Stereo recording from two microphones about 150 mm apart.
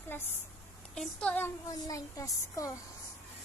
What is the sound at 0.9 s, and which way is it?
Speech, 5° left (ahead or behind).